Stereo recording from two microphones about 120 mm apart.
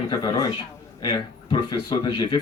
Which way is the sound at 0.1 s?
30° left (ahead or behind).